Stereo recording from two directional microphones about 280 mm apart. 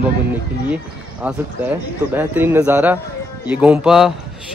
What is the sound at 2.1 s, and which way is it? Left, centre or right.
A man's voice, centre.